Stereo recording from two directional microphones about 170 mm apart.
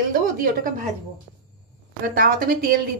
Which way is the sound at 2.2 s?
55° right (ahead or behind).